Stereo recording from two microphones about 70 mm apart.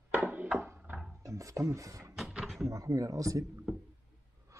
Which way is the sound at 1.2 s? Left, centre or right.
Right.